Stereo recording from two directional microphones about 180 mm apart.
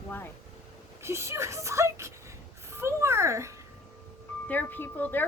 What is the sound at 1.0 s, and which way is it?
Speech, 15° right (ahead or behind).